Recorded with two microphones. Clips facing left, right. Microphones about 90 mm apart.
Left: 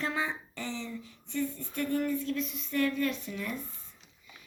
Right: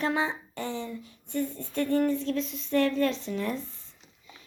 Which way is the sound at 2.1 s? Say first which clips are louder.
Right 4 dB; 70° right (ahead or behind).